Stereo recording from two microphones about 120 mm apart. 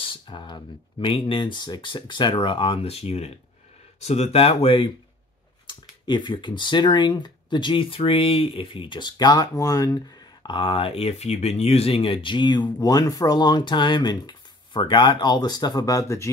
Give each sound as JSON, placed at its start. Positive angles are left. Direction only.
{"t": 0.0, "sound": "speech", "side_deg": 45}
{"t": 10.4, "sound": "speech", "side_deg": 45}